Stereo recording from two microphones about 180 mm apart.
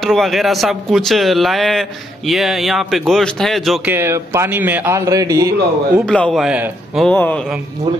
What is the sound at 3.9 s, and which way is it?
A man's voice, 15° right (ahead or behind).